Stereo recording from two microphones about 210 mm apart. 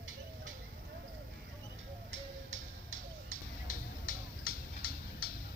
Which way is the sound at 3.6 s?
45° left (ahead or behind).